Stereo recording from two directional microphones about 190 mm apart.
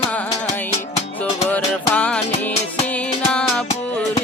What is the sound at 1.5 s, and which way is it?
Music, 5° left (ahead or behind).